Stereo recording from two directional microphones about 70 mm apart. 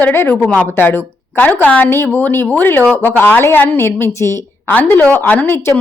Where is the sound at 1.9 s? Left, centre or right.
Left.